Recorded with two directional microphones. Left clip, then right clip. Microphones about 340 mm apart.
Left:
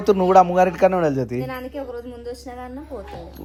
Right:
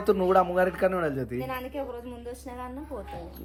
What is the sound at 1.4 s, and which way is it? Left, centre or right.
A woman's voice, centre.